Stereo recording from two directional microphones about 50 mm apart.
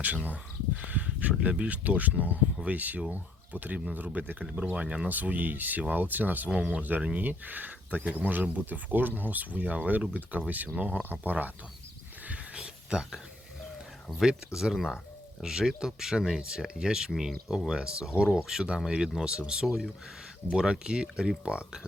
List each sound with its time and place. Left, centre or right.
0.0 s speech: right
5.0 s speech: right
12.5 s a sound: centre
14.2 s speech: centre
19.6 s speech: centre
20.5 s speech: centre